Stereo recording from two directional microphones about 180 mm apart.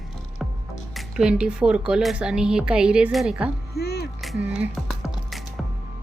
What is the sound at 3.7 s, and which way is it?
Music, 65° left (ahead or behind).